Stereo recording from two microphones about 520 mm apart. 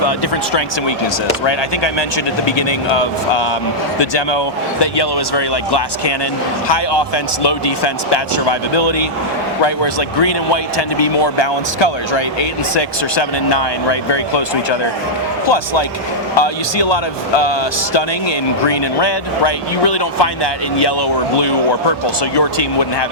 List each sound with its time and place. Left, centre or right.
1.5 s speech: left
8.1 s speech: left
18.6 s speech: left